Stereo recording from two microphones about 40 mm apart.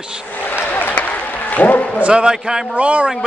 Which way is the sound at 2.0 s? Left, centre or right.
Right.